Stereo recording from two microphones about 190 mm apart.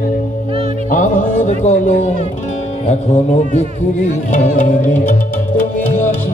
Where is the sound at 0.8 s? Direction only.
40° left (ahead or behind).